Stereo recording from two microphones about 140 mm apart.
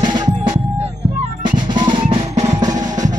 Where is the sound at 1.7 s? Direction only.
35° right (ahead or behind).